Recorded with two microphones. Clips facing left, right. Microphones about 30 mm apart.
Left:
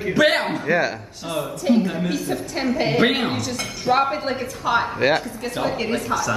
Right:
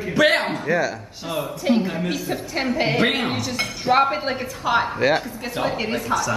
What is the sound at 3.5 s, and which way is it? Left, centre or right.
Speech, right.